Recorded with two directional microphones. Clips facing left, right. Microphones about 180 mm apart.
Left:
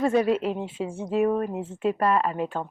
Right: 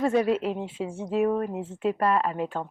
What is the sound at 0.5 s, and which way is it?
A woman's voice, 35° left (ahead or behind).